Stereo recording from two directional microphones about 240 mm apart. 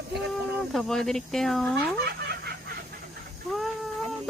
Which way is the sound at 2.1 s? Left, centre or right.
Right.